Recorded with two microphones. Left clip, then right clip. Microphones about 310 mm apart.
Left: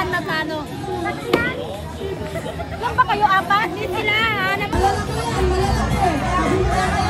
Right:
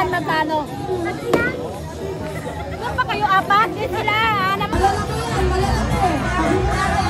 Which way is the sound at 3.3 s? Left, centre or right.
Centre.